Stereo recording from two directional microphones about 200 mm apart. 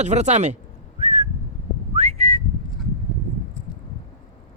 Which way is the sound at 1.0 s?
35° right (ahead or behind).